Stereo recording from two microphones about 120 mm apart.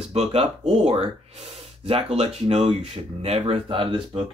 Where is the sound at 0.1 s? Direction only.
55° right (ahead or behind).